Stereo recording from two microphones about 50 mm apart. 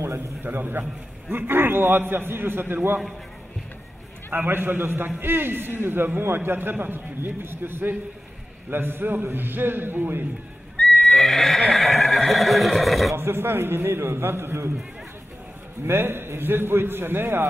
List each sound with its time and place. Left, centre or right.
0.0 s a man's voice: right
0.5 s a man's voice: right
4.3 s a man's voice: right
10.8 s horse: centre
11.7 s speech: centre
13.1 s a man's voice: right
15.9 s a man's voice: right